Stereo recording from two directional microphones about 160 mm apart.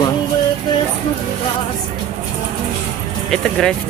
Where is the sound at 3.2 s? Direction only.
5° left (ahead or behind).